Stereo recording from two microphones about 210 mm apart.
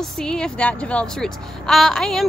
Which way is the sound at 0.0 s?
5° left (ahead or behind).